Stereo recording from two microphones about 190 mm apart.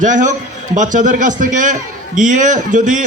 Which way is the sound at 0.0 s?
40° right (ahead or behind).